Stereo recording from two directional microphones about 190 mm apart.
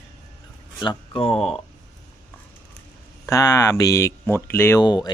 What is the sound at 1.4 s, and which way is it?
Speech, centre (ahead or behind).